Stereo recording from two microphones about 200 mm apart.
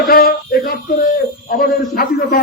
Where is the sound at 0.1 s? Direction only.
45° left (ahead or behind).